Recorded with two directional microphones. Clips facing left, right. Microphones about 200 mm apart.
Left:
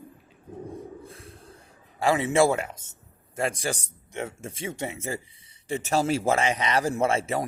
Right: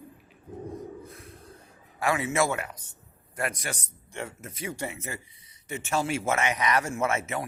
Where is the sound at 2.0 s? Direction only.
30° left (ahead or behind).